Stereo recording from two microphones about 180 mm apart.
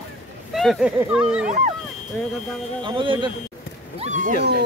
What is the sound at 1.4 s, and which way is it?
Speech, 40° right (ahead or behind).